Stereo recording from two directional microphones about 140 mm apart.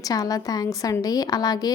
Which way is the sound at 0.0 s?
25° left (ahead or behind).